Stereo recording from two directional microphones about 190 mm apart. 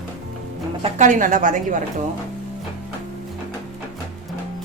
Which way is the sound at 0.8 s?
40° right (ahead or behind).